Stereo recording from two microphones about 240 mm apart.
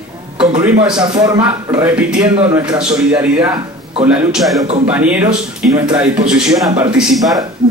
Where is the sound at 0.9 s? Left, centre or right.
Centre.